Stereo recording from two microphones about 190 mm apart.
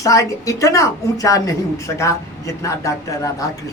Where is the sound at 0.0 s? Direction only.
15° left (ahead or behind).